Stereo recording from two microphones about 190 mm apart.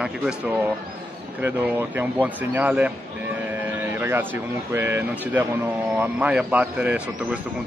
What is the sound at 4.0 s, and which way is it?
A man's voice, 10° right (ahead or behind).